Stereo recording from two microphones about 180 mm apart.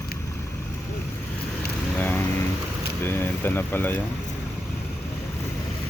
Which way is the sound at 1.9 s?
10° left (ahead or behind).